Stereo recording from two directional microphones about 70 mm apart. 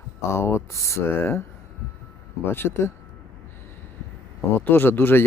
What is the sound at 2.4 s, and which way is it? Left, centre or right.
Speech, left.